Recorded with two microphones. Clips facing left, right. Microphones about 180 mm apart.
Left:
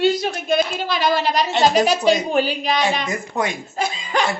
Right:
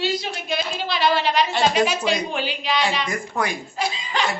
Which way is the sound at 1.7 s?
40° left (ahead or behind).